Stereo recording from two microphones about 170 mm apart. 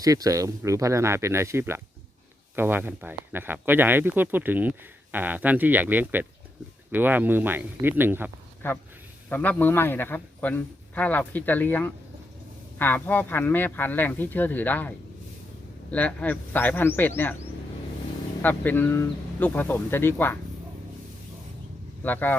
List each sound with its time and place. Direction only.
0.0 s speech: 20° right (ahead or behind)
8.6 s a man's voice: 10° left (ahead or behind)
18.4 s a man's voice: 10° left (ahead or behind)
22.0 s a man's voice: 10° left (ahead or behind)